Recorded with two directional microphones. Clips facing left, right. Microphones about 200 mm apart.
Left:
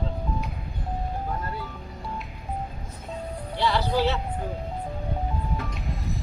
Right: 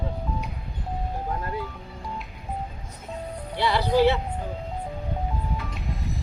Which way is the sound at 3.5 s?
15° right (ahead or behind).